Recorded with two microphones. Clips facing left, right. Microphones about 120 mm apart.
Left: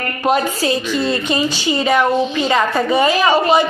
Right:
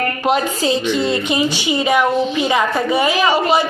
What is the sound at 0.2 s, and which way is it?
A woman's voice, 15° right (ahead or behind).